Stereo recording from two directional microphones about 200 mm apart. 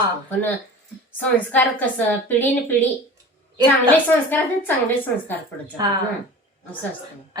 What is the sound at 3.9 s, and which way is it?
A woman's voice, 10° left (ahead or behind).